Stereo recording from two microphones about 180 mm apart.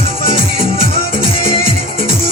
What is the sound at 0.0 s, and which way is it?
Music, 30° left (ahead or behind).